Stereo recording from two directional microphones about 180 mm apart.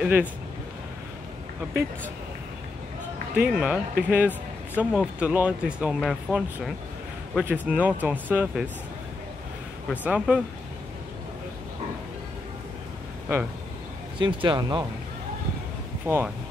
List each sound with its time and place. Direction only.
0.0 s speech: 10° right (ahead or behind)
3.3 s speech: 5° right (ahead or behind)
9.8 s speech: 5° right (ahead or behind)
14.1 s speech: 25° right (ahead or behind)
16.1 s speech: 15° right (ahead or behind)